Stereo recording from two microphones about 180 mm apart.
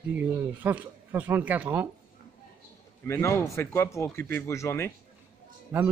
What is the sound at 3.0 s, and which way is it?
Speech, 15° left (ahead or behind).